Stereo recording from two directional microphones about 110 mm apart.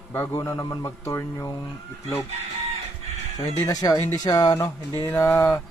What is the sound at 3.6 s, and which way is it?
Speech, 35° left (ahead or behind).